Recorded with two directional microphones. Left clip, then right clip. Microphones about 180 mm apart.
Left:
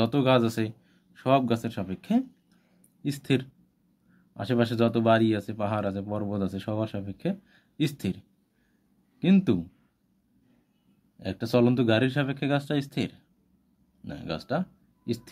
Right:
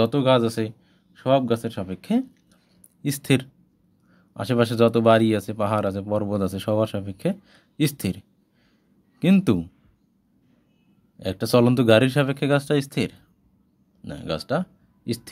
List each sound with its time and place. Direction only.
0.0 s speech: 15° right (ahead or behind)
3.0 s speech: 30° right (ahead or behind)
11.1 s speech: 25° right (ahead or behind)